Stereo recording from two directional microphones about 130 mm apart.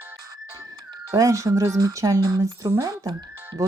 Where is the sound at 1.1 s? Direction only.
25° right (ahead or behind).